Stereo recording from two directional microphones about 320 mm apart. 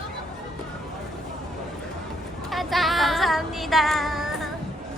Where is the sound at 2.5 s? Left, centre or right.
Centre.